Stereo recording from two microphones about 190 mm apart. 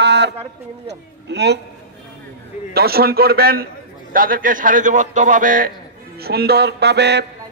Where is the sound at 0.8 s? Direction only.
65° right (ahead or behind).